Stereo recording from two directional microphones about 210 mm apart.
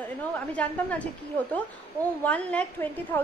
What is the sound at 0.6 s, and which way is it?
Speech, 5° left (ahead or behind).